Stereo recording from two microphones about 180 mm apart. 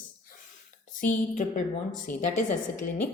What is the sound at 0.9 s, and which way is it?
A woman's voice, 45° left (ahead or behind).